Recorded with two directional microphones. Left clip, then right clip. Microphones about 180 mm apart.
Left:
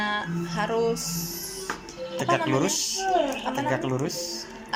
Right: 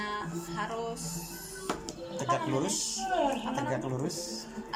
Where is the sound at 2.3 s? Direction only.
Centre (ahead or behind).